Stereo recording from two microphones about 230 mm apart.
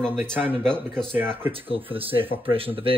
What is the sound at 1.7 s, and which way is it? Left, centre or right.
Speech, right.